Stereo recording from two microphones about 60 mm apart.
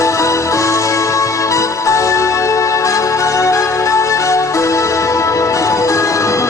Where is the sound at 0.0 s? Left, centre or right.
Left.